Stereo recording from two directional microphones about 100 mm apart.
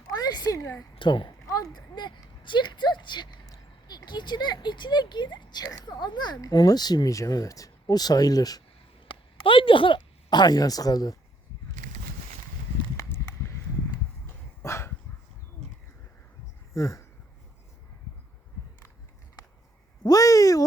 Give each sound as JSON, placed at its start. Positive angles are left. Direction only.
{"t": 0.1, "sound": "a sound", "side_deg": 40}
{"t": 0.6, "sound": "a woman's voice", "side_deg": 30}
{"t": 0.9, "sound": "a child's voice", "side_deg": 55}
{"t": 1.5, "sound": "speech", "side_deg": 35}
{"t": 9.0, "sound": "speech", "side_deg": 60}
{"t": 13.0, "sound": "walk", "side_deg": 30}
{"t": 14.6, "sound": "dog", "side_deg": 30}
{"t": 16.7, "sound": "speech", "side_deg": 30}
{"t": 20.1, "sound": "speech", "side_deg": 35}